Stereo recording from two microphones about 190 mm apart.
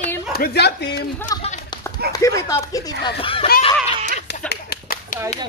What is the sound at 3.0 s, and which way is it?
Speech, 30° left (ahead or behind).